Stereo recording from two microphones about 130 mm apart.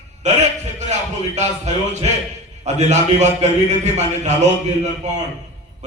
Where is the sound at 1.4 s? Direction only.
65° right (ahead or behind).